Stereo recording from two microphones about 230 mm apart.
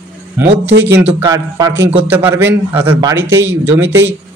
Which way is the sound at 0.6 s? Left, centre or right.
Right.